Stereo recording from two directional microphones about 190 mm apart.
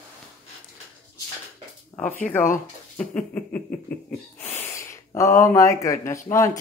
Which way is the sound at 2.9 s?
5° left (ahead or behind).